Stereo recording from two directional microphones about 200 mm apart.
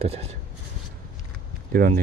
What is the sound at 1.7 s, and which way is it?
Speech, 50° right (ahead or behind).